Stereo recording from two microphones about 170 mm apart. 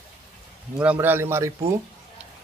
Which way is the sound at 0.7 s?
10° right (ahead or behind).